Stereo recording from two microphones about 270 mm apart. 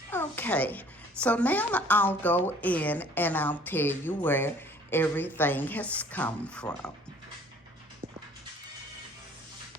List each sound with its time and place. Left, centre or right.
0.1 s a woman's voice: centre